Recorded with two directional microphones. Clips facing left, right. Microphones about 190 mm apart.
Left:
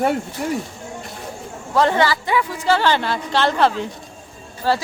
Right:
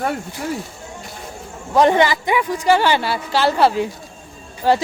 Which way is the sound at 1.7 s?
15° right (ahead or behind).